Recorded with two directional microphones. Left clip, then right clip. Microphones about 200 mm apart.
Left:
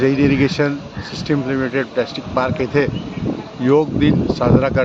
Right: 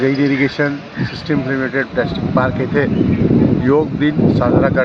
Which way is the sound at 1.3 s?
10° left (ahead or behind).